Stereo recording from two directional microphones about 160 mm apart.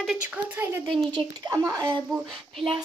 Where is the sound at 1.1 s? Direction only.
25° right (ahead or behind).